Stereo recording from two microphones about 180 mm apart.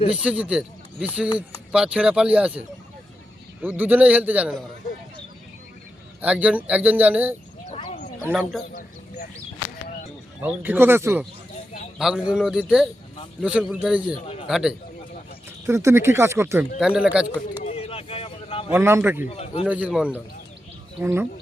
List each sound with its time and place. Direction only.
0.2 s speech: 5° right (ahead or behind)
3.6 s speech: 10° right (ahead or behind)
6.2 s speech: 10° right (ahead or behind)
7.7 s a sound: 35° left (ahead or behind)
8.2 s speech: 5° left (ahead or behind)
10.4 s speech: 10° right (ahead or behind)
15.6 s speech: 15° right (ahead or behind)
17.6 s a sound: 35° left (ahead or behind)
18.7 s speech: 15° right (ahead or behind)
19.3 s a man's voice: 35° left (ahead or behind)
19.6 s speech: 10° right (ahead or behind)